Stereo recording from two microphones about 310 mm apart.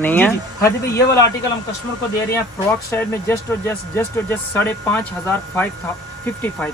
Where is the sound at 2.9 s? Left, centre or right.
Centre.